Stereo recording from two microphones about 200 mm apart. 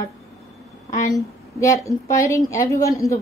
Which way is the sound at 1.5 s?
15° left (ahead or behind).